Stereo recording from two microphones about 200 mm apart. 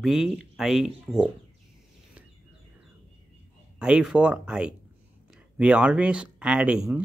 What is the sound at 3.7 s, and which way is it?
Speech, 5° right (ahead or behind).